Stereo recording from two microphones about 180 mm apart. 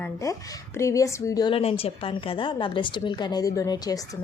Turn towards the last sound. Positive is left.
turn(degrees=20)  # may be behind; listen again after turning